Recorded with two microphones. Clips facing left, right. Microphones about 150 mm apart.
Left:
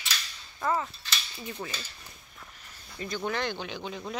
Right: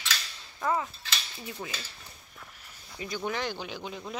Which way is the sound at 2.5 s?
10° right (ahead or behind).